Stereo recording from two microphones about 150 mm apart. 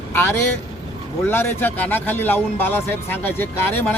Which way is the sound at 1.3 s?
15° left (ahead or behind).